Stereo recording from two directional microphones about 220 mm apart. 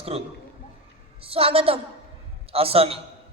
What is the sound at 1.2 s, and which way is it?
A woman's voice, 25° right (ahead or behind).